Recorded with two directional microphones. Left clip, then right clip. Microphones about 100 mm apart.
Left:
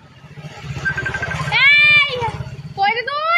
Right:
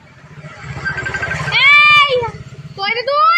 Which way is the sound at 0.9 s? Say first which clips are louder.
Right 2 dB; 25° right (ahead or behind).